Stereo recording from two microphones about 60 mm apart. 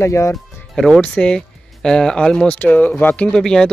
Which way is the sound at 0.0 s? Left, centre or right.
Left.